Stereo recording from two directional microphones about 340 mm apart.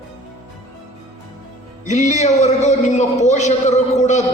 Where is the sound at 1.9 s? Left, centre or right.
Centre.